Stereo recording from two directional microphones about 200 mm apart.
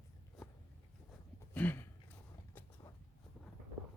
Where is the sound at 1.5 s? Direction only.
10° left (ahead or behind).